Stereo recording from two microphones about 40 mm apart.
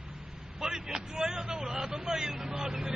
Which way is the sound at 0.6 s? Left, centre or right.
Centre.